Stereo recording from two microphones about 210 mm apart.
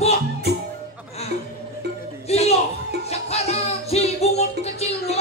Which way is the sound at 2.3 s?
30° left (ahead or behind).